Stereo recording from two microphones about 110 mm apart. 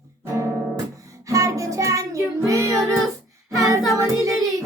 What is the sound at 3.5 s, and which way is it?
Child singing, 30° right (ahead or behind).